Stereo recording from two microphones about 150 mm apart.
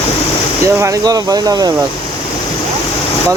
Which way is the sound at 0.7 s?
20° right (ahead or behind).